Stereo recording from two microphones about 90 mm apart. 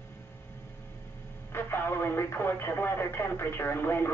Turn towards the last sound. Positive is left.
turn(degrees=25)  # may be behind; listen again after turning